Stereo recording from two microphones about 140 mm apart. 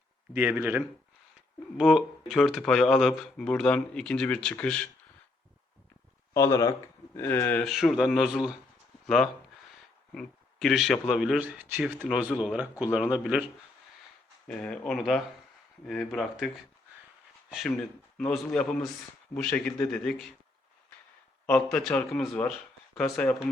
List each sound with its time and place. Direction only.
0.5 s speech: 10° right (ahead or behind); by 4.9 s 5° left (ahead or behind)
6.3 s a man's voice: 20° left (ahead or behind)
7.6 s speech: centre (ahead or behind)
14.4 s speech: 5° left (ahead or behind)
18.2 s speech: 5° left (ahead or behind)
21.4 s a man's voice: 10° left (ahead or behind)